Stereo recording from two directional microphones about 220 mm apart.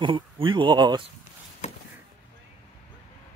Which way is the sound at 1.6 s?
30° left (ahead or behind).